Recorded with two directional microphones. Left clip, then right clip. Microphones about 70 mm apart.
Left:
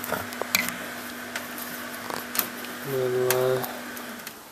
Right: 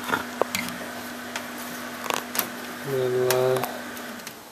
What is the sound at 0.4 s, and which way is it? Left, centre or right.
Tick, centre.